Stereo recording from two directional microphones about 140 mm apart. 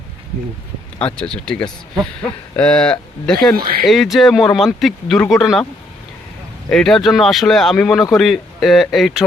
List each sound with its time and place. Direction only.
0.9 s speech: 5° left (ahead or behind)
3.5 s speech: 90° right
3.8 s speech: centre (ahead or behind)
6.7 s speech: 5° left (ahead or behind)